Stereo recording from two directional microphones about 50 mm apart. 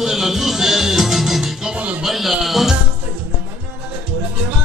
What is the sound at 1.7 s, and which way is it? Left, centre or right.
Music, right.